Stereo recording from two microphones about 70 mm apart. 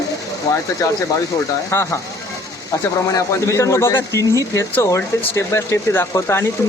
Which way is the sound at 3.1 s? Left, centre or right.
Left.